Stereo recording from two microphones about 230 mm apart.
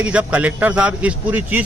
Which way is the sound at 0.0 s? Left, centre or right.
Centre.